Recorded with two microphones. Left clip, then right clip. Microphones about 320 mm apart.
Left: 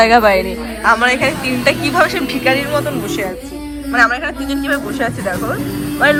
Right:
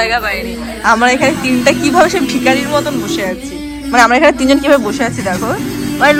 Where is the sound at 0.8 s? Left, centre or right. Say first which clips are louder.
Right 2 dB; centre.